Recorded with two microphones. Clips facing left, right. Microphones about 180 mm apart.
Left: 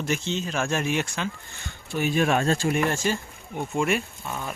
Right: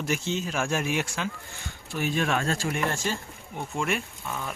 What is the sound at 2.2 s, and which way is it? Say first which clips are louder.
Speech: left 6 dB; 45° left (ahead or behind).